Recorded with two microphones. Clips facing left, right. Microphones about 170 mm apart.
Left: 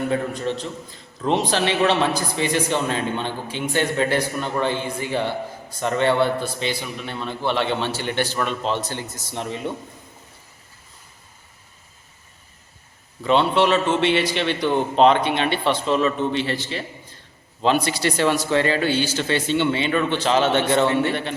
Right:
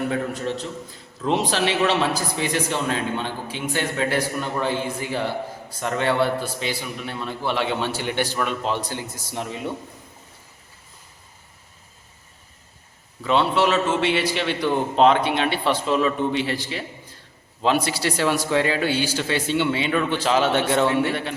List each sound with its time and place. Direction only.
0.1 s a man's voice: 5° right (ahead or behind)
13.2 s a man's voice: 5° right (ahead or behind)